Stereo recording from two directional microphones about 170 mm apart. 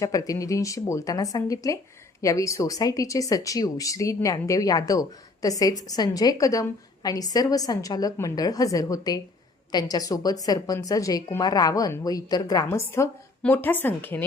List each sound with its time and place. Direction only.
0.0 s a woman's voice: 20° left (ahead or behind)